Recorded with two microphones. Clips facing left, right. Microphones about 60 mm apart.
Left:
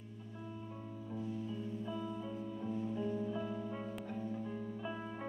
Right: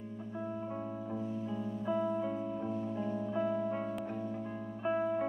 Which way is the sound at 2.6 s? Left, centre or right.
Right.